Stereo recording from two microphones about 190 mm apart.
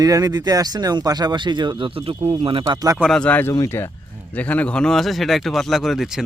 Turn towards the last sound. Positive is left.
turn(degrees=0)  # may be behind; listen again after turning